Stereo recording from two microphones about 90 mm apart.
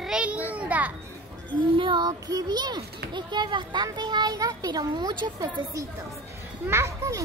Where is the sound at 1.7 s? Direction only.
70° right (ahead or behind).